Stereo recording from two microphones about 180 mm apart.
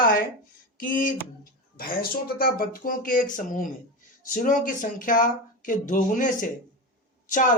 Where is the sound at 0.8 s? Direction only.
50° left (ahead or behind).